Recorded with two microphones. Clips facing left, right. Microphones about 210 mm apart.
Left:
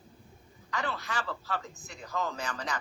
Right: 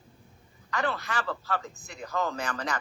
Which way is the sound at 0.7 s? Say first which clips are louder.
Right 4 dB; 60° right (ahead or behind).